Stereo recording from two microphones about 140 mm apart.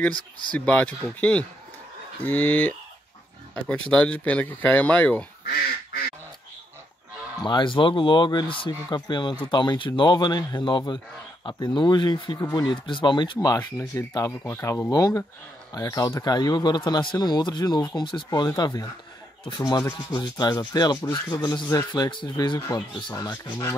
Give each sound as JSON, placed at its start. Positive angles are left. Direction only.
{"t": 0.0, "sound": "speech", "side_deg": 10}
{"t": 2.2, "sound": "speech", "side_deg": 10}
{"t": 7.4, "sound": "speech", "side_deg": 35}